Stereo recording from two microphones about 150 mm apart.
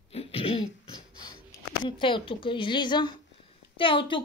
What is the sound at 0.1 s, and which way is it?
Throat clearing, 40° left (ahead or behind).